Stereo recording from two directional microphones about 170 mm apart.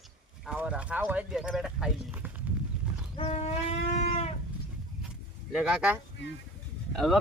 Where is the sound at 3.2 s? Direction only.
40° left (ahead or behind).